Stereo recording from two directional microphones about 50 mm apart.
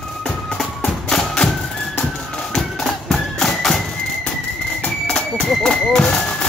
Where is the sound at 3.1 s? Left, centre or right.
Centre.